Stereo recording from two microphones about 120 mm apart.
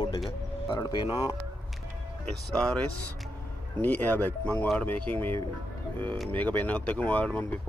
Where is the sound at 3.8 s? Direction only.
15° left (ahead or behind).